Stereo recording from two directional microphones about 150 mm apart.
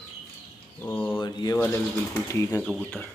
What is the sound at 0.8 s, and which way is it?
Speech, 15° left (ahead or behind).